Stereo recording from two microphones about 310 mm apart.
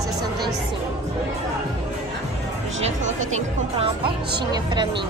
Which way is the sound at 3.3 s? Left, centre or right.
Centre.